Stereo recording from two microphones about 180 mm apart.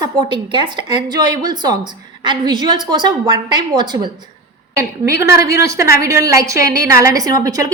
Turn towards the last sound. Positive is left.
turn(degrees=-20)  # may be behind; listen again after turning